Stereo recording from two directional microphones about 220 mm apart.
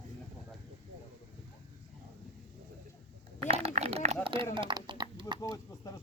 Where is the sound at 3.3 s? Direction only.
25° right (ahead or behind).